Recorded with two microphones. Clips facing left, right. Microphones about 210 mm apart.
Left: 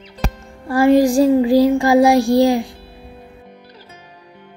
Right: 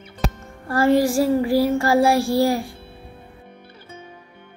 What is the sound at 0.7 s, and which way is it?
Child singing, 15° left (ahead or behind).